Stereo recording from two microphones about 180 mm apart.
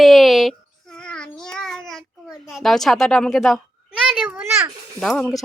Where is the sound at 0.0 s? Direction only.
Centre (ahead or behind).